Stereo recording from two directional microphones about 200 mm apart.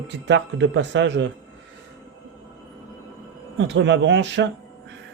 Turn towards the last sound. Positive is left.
turn(degrees=-60)  # may be behind; listen again after turning